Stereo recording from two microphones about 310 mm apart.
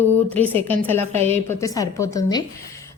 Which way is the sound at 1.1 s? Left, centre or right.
Centre.